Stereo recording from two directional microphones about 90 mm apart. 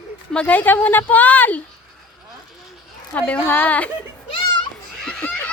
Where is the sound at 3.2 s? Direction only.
15° left (ahead or behind).